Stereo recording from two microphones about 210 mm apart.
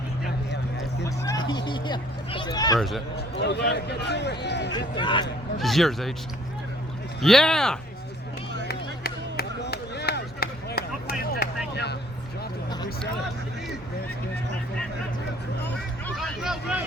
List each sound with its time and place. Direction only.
1.0 s a sound: 15° left (ahead or behind)
2.7 s speech: centre (ahead or behind)
3.2 s speech: 55° left (ahead or behind)
4.9 s speech: 20° left (ahead or behind)
5.5 s speech: centre (ahead or behind)
7.2 s speech: centre (ahead or behind)
8.6 s chop: 50° left (ahead or behind)
16.0 s vehicle: centre (ahead or behind)